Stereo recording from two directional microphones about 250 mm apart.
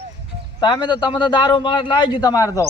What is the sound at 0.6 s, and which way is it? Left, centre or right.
A man's voice, centre.